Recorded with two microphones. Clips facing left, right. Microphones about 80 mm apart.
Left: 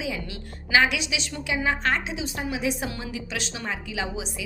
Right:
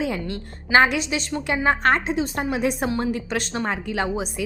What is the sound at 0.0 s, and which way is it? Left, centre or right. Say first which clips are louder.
A woman's voice: right 6 dB; right.